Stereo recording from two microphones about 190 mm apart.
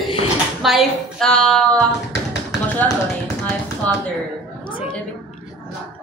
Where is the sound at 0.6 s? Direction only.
Centre (ahead or behind).